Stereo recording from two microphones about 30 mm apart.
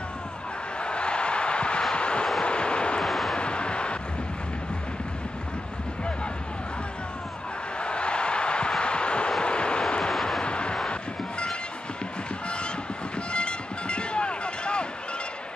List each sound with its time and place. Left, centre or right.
0.7 s a sound: left
2.0 s vehicle: left
3.0 s vehicle: centre
3.3 s vehicle: left
7.8 s a sound: left
9.4 s vehicle: left
13.3 s music: left